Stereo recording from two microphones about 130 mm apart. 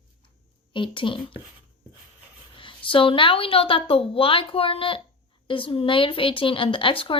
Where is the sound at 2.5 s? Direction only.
40° left (ahead or behind).